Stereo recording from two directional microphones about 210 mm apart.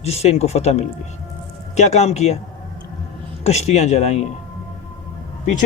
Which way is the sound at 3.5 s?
30° left (ahead or behind).